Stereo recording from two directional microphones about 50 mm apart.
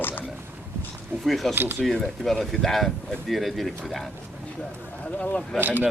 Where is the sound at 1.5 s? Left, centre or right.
Right.